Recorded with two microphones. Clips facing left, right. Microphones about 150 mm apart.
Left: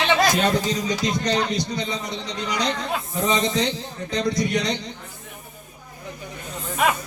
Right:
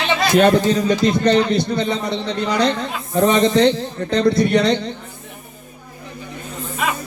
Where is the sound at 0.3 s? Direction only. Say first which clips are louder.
Right 8 dB; 60° right (ahead or behind).